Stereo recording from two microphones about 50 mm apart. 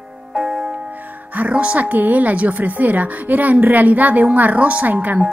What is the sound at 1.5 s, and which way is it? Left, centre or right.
A woman's voice, right.